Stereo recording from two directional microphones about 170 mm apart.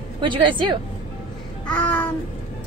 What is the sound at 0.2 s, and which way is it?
Speech, 30° right (ahead or behind).